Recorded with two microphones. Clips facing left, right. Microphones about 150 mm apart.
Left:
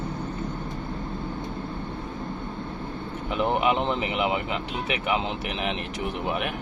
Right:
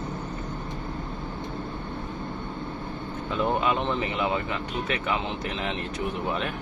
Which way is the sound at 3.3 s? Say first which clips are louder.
Left 2 dB; 20° left (ahead or behind).